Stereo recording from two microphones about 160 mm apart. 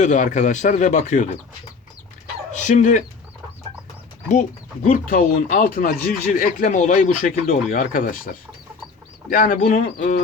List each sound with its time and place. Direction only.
0.0 s speech: 50° left (ahead or behind)
2.5 s speech: 50° left (ahead or behind)
4.3 s speech: 50° left (ahead or behind)
9.3 s speech: 60° left (ahead or behind)